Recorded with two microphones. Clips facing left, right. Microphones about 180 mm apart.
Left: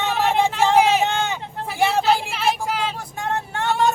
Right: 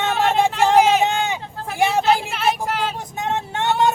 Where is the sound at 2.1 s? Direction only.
Centre (ahead or behind).